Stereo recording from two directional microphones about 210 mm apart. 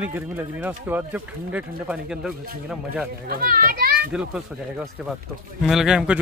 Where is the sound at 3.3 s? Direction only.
45° right (ahead or behind).